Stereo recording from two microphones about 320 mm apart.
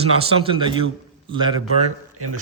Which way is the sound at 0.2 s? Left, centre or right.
Centre.